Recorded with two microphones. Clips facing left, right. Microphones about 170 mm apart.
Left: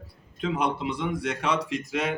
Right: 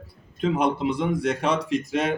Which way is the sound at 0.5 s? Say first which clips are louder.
Right 4 dB; 45° right (ahead or behind).